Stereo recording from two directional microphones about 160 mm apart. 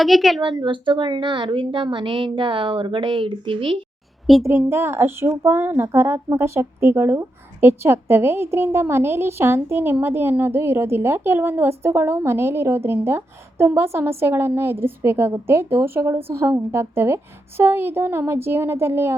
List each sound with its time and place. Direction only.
0.0 s speech: centre (ahead or behind)
0.4 s a woman's voice: 30° right (ahead or behind)
4.4 s speech: 15° right (ahead or behind)